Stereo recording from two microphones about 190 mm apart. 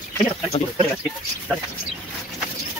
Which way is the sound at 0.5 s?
35° left (ahead or behind).